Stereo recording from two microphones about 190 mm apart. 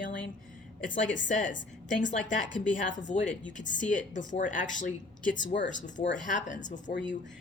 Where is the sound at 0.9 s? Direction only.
75° left (ahead or behind).